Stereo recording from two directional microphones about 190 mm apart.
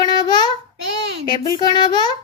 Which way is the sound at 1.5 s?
25° left (ahead or behind).